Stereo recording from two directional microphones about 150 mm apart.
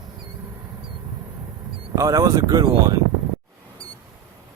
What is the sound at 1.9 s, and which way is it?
Speech, 20° right (ahead or behind).